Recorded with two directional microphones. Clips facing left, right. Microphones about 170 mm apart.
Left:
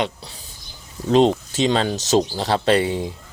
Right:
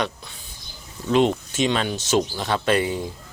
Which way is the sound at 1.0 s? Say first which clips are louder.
Left 3 dB; 35° left (ahead or behind).